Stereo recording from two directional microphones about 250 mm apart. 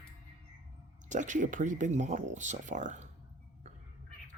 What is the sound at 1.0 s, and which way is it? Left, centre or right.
Speech, right.